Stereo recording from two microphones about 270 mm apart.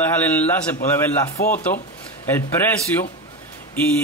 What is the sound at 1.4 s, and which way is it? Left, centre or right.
Speech, left.